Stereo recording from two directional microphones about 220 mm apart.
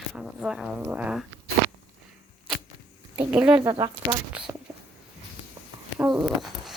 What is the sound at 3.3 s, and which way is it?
Speech, 5° right (ahead or behind).